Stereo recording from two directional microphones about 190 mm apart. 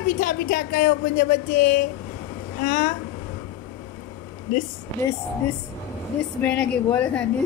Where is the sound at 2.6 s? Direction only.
55° left (ahead or behind).